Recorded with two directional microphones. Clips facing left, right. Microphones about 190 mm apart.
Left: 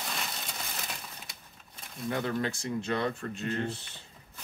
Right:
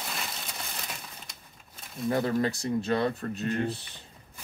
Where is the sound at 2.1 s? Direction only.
40° right (ahead or behind).